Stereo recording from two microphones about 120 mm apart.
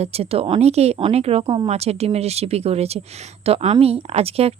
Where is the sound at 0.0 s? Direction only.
55° right (ahead or behind).